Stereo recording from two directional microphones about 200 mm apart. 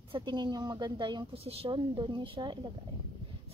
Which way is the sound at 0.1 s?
20° right (ahead or behind).